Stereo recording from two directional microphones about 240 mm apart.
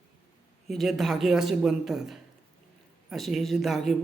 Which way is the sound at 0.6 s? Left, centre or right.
Centre.